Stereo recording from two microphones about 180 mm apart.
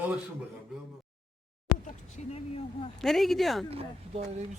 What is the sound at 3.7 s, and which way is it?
Speech, 35° right (ahead or behind).